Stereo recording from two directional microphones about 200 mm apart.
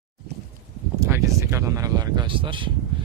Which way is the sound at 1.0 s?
15° right (ahead or behind).